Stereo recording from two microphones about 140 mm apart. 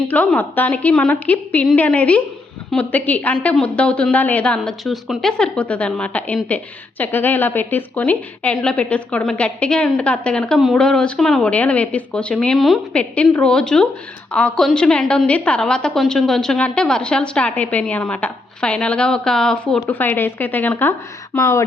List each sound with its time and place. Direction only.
0.1 s a woman's voice: 10° left (ahead or behind)